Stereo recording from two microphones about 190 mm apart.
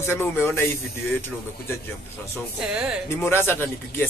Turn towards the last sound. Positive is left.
turn(degrees=10)  # may be behind; listen again after turning